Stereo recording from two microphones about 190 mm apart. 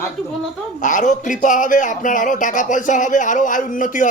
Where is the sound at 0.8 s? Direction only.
40° left (ahead or behind).